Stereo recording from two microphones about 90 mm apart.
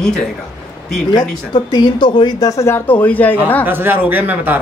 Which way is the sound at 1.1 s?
60° left (ahead or behind).